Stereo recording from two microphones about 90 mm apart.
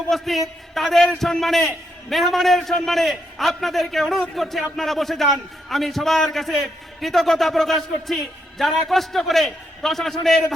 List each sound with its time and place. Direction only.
0.1 s a man's voice: centre (ahead or behind)